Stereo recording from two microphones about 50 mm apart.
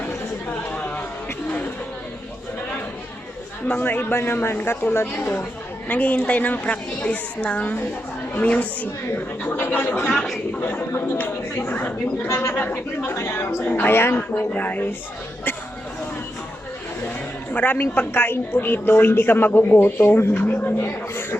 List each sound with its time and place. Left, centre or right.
3.7 s a woman's voice: left
5.9 s a woman's voice: left
9.5 s a woman's voice: left
12.3 s a woman's voice: left
13.1 s a woman's voice: left
13.7 s a woman's voice: left
14.5 s a woman's voice: left
17.5 s a woman's voice: left